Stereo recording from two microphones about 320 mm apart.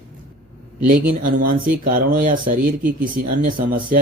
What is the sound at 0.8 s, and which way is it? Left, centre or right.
Speech, right.